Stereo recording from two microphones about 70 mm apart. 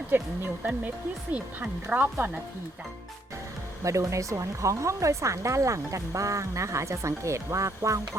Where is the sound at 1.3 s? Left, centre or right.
Right.